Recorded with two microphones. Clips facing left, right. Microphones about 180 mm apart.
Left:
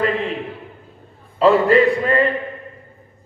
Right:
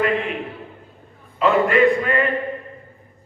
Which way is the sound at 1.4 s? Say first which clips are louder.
Left 3 dB; 35° left (ahead or behind).